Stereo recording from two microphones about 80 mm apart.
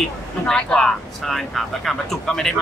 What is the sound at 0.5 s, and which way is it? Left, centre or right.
Speech, centre.